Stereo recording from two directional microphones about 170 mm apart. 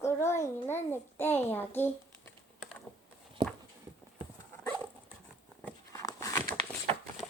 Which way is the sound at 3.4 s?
30° right (ahead or behind).